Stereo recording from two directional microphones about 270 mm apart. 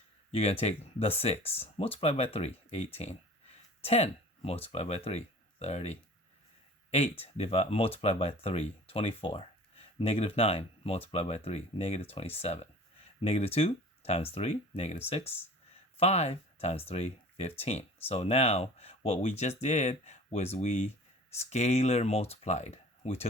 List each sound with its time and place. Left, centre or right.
0.3 s speech: left